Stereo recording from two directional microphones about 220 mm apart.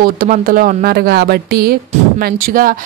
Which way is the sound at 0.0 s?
40° right (ahead or behind).